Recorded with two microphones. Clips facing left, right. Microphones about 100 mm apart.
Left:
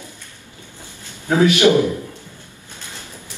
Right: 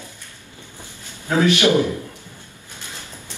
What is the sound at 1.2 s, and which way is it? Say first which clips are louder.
Speech: left 3 dB; 20° left (ahead or behind).